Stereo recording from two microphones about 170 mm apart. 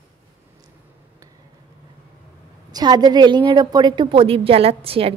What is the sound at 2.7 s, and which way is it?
A woman's voice, 25° right (ahead or behind).